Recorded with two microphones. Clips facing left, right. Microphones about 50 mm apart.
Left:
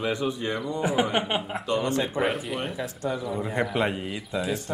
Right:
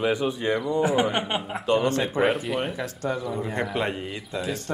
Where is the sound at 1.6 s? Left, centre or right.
Right.